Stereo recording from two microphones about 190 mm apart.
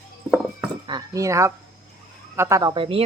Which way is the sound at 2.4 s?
15° right (ahead or behind).